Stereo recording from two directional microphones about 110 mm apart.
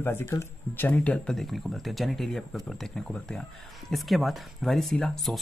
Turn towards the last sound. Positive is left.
turn(degrees=5)  # may be behind; listen again after turning